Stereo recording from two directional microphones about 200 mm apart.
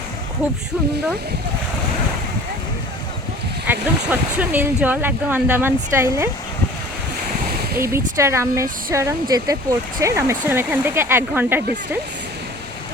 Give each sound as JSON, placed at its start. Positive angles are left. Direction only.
{"t": 3.7, "sound": "speech", "side_deg": -10}
{"t": 7.5, "sound": "a sound", "side_deg": -50}
{"t": 7.8, "sound": "speech", "side_deg": -15}